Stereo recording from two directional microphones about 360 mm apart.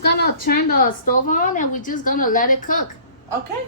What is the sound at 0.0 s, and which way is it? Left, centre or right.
Speech, left.